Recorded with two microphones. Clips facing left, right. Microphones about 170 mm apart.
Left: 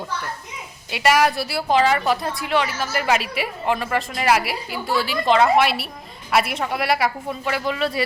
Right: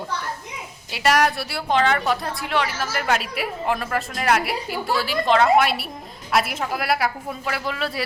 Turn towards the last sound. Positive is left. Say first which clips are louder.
# left 4 dB
turn(degrees=0)  # may be behind; listen again after turning